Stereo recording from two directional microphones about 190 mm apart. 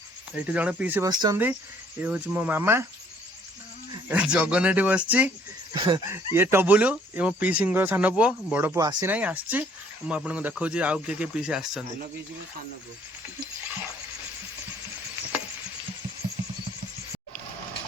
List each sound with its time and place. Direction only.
0.3 s speech: 5° right (ahead or behind)
1.1 s speech: 20° right (ahead or behind)
2.0 s speech: 10° right (ahead or behind)
4.1 s speech: 5° right (ahead or behind)
5.7 s speech: 25° right (ahead or behind)
6.1 s speech: 10° right (ahead or behind)
9.1 s speech: 5° right (ahead or behind)